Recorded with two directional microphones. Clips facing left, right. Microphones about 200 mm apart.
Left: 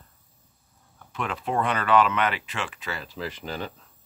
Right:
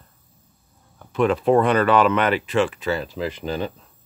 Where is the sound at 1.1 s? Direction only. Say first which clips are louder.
Right 11 dB; 40° right (ahead or behind).